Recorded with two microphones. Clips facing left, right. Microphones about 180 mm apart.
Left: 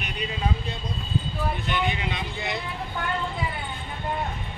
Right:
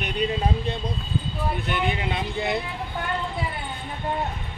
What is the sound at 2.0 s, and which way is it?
Speech, 55° right (ahead or behind).